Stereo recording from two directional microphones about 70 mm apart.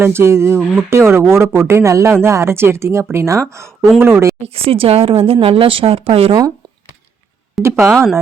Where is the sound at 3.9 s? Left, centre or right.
Right.